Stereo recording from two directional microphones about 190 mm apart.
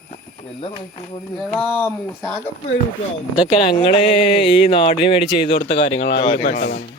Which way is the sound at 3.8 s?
30° left (ahead or behind).